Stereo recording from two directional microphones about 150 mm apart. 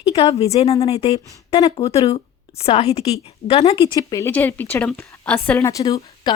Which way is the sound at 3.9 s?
20° left (ahead or behind).